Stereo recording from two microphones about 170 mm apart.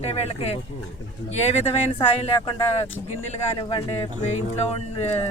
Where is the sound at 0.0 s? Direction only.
35° left (ahead or behind).